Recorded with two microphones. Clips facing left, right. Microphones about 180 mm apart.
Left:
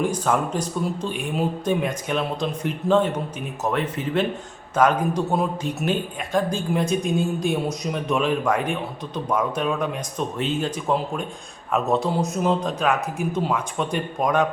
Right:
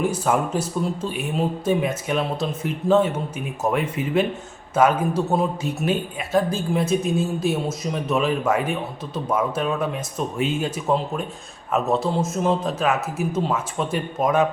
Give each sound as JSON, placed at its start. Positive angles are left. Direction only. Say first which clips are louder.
{"t": 0.0, "sound": "speech", "louder": "right 1 dB", "side_deg": -5}